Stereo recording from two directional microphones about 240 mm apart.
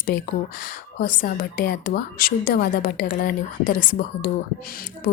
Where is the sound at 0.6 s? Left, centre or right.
Left.